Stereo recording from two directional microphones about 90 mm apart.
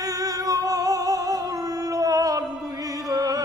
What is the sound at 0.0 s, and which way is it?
Music, 40° right (ahead or behind).